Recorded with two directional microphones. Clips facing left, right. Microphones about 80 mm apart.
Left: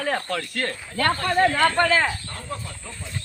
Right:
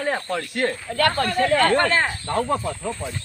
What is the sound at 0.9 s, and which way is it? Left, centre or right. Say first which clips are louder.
Speech: right 2 dB; right.